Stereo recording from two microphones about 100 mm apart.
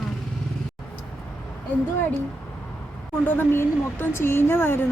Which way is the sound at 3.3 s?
20° left (ahead or behind).